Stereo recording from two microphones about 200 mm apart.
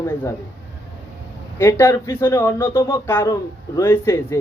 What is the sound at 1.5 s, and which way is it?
Speech, 15° left (ahead or behind).